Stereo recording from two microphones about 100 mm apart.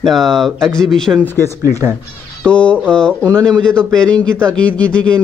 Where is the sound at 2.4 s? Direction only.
10° left (ahead or behind).